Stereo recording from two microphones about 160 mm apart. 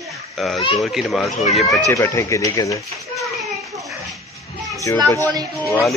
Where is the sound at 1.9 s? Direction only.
15° left (ahead or behind).